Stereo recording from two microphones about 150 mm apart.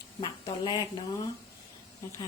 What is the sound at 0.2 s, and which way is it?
Speech, 30° left (ahead or behind).